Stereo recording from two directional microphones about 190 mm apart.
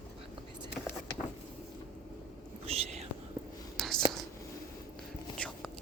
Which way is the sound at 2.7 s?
35° right (ahead or behind).